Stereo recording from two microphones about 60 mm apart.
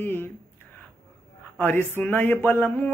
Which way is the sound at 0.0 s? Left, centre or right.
Left.